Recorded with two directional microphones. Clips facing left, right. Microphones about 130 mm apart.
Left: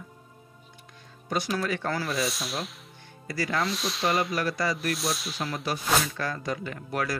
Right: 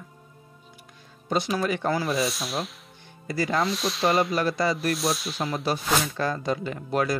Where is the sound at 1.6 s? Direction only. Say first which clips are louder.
Right 4 dB; 15° right (ahead or behind).